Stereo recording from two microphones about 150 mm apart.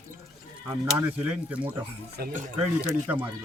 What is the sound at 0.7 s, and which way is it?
Speech, 10° right (ahead or behind).